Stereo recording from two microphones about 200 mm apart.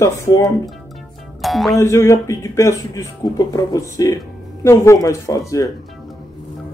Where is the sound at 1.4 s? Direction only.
Centre (ahead or behind).